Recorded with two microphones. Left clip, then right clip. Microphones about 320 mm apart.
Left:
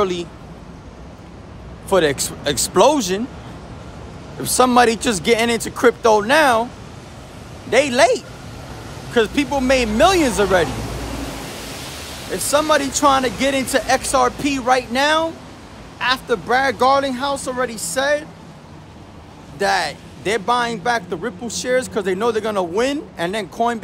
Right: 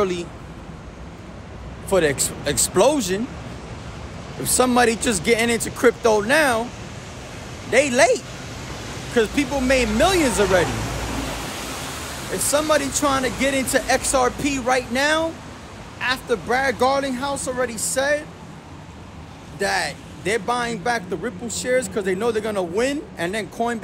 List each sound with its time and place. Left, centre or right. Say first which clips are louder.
0.0 s speech: left 3 dB; centre
1.9 s speech: left 3 dB; centre
4.4 s speech: left 4 dB; centre
7.7 s speech: left 2 dB; centre
12.4 s speech: left 3 dB; centre
19.6 s speech: left 4 dB; centre